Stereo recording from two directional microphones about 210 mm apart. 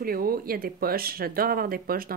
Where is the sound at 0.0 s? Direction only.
45° right (ahead or behind).